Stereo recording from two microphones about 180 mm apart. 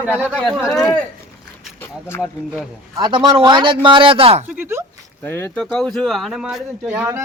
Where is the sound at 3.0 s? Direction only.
25° right (ahead or behind).